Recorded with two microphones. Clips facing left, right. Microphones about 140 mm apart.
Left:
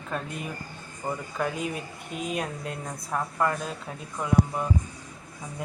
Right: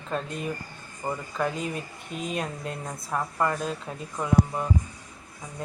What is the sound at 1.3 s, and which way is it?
Speech, 5° left (ahead or behind).